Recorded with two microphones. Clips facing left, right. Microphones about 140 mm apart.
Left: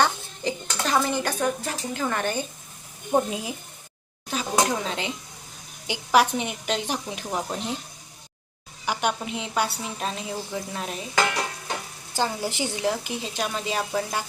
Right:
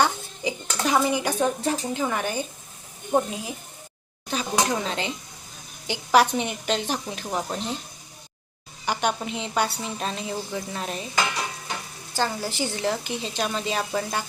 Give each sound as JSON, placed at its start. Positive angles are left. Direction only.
{"t": 0.0, "sound": "a sound", "side_deg": -10}
{"t": 1.6, "sound": "speech", "side_deg": -20}
{"t": 2.0, "sound": "speech", "side_deg": -5}
{"t": 3.1, "sound": "a woman's voice", "side_deg": 5}
{"t": 7.3, "sound": "a woman's voice", "side_deg": 0}
{"t": 7.5, "sound": "speech", "side_deg": 15}
{"t": 8.9, "sound": "a woman's voice", "side_deg": 5}
{"t": 12.1, "sound": "speech", "side_deg": 15}